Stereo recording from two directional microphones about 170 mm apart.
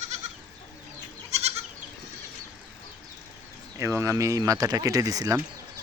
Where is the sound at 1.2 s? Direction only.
40° right (ahead or behind).